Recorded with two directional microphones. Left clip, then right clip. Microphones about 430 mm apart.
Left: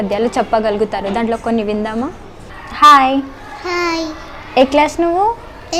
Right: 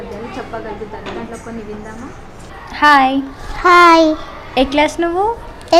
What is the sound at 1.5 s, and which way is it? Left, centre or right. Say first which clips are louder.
Speech: left 12 dB; left.